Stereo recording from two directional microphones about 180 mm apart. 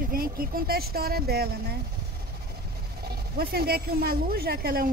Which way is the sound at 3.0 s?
60° right (ahead or behind).